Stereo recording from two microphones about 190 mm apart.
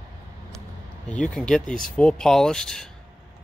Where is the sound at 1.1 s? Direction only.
5° left (ahead or behind).